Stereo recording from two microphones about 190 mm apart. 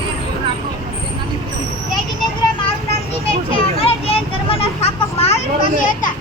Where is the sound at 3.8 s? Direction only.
30° left (ahead or behind).